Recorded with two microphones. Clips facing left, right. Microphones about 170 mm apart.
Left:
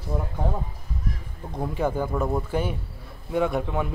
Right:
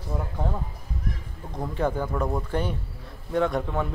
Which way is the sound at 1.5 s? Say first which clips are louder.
Left 1 dB; 10° left (ahead or behind).